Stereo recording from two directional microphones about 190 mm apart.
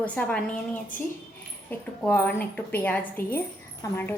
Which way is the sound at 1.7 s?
10° left (ahead or behind).